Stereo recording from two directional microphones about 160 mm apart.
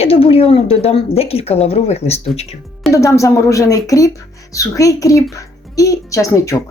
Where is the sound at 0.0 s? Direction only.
35° left (ahead or behind).